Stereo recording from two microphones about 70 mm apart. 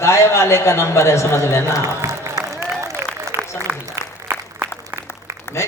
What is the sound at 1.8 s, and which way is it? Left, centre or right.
Applause, right.